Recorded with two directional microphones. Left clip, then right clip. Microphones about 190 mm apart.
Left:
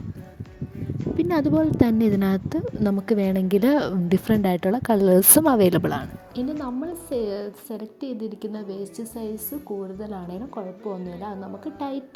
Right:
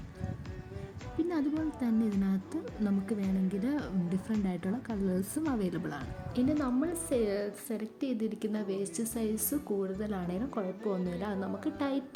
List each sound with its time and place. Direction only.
1.2 s a woman's voice: 40° left (ahead or behind)
6.3 s a woman's voice: 5° left (ahead or behind)